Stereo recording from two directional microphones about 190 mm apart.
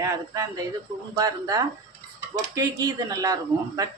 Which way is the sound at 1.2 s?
20° right (ahead or behind).